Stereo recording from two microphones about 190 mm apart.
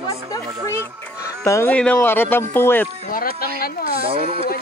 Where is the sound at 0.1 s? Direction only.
15° left (ahead or behind).